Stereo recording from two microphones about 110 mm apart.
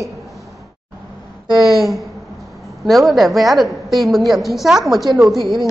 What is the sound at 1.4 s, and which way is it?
Speech, 40° right (ahead or behind).